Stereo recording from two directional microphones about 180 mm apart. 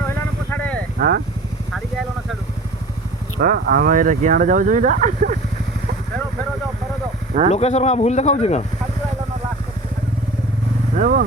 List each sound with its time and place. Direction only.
0.0 s vehicle: 10° left (ahead or behind)
0.9 s speech: 55° right (ahead or behind)
3.3 s speech: 55° right (ahead or behind)
7.5 s speech: 35° left (ahead or behind)
10.9 s speech: 45° right (ahead or behind)